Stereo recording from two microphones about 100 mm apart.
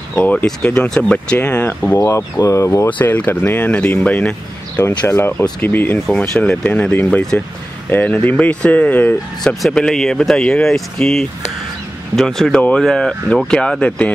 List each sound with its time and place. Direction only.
0.1 s speech: 15° left (ahead or behind)
2.0 s speech: 35° left (ahead or behind)
3.0 s speech: 15° left (ahead or behind)
4.8 s speech: 25° left (ahead or behind)